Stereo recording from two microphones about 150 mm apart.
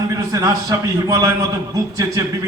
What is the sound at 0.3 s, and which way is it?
A man's voice, 20° right (ahead or behind).